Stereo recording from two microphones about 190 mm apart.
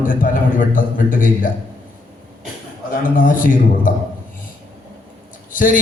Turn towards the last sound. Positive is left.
turn(degrees=45)  # may be behind; listen again after turning